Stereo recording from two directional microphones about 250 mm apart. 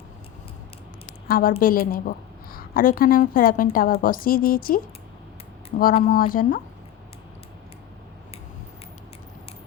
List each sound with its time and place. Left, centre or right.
1.3 s a woman's voice: left
5.9 s a woman's voice: left